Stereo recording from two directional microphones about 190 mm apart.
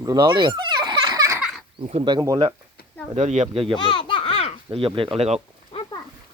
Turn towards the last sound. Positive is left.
turn(degrees=25)  # may be behind; listen again after turning